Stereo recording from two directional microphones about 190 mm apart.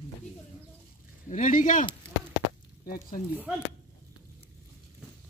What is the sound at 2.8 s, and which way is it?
Speech, 50° left (ahead or behind).